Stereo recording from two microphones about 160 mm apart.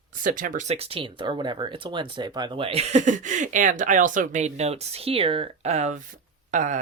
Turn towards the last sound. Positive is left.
turn(degrees=-50)  # may be behind; listen again after turning